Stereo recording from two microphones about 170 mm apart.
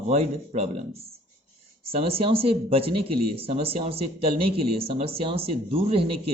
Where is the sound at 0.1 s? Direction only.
40° right (ahead or behind).